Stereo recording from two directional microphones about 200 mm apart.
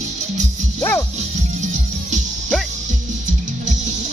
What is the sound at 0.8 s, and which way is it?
Music, 10° left (ahead or behind).